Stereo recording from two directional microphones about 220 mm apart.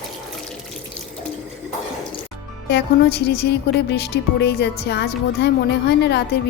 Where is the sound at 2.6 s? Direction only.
50° left (ahead or behind).